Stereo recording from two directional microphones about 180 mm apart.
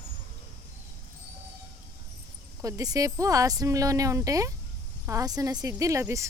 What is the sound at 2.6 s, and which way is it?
Speech, 20° right (ahead or behind).